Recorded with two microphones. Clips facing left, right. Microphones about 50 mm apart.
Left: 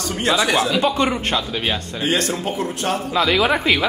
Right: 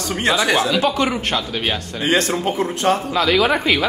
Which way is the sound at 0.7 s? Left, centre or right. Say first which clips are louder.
Even; centre.